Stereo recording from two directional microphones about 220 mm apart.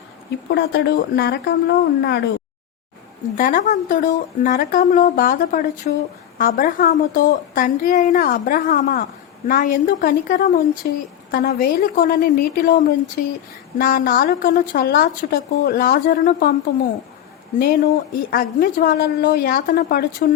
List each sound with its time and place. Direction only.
0.5 s a woman's voice: 50° left (ahead or behind)
3.3 s a woman's voice: 35° left (ahead or behind)
18.1 s a woman's voice: 40° left (ahead or behind)